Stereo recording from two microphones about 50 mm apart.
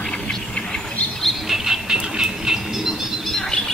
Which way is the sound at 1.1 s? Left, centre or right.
Centre.